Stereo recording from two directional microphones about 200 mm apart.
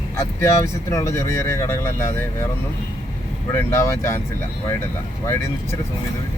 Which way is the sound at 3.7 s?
15° left (ahead or behind).